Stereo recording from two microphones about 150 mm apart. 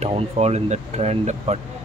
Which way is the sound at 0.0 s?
45° right (ahead or behind).